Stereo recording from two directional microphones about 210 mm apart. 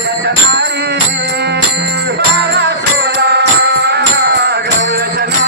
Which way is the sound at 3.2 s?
55° right (ahead or behind).